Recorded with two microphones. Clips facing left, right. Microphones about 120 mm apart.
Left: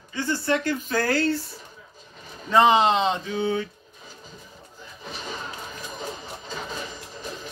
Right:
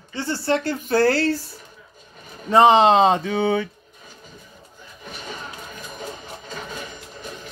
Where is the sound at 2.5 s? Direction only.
35° right (ahead or behind).